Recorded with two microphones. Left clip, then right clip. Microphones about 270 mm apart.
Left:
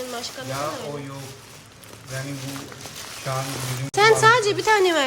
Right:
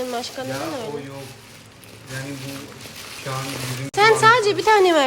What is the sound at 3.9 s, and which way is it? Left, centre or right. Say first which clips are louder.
Speech: right 1 dB; centre.